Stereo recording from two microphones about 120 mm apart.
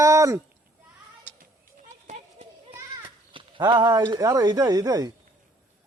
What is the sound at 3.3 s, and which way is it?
Speech, 40° right (ahead or behind).